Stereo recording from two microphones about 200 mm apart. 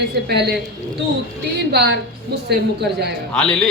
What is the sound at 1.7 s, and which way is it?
Speech, 55° right (ahead or behind).